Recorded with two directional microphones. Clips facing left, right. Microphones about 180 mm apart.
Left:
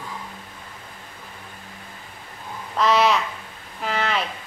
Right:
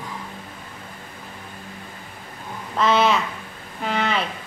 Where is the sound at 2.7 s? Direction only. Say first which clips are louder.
Even; centre (ahead or behind).